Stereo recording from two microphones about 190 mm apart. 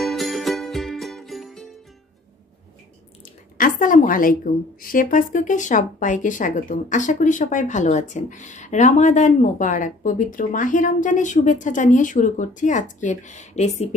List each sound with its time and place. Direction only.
0.1 s music: centre (ahead or behind)
3.5 s a woman's voice: 45° left (ahead or behind)